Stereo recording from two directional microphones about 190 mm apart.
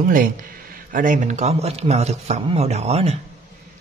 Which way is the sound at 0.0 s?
45° right (ahead or behind).